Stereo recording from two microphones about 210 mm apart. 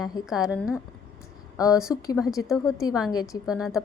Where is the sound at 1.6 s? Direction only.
15° left (ahead or behind).